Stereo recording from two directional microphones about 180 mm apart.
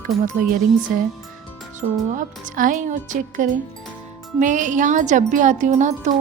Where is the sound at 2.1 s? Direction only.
45° right (ahead or behind).